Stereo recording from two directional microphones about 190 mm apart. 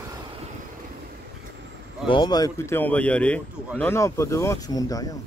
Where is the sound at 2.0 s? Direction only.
25° left (ahead or behind).